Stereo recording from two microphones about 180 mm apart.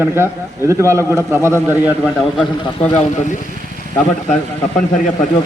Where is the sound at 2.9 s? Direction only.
35° left (ahead or behind).